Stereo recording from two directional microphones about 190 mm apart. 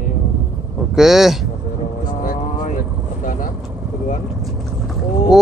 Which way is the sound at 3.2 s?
45° left (ahead or behind).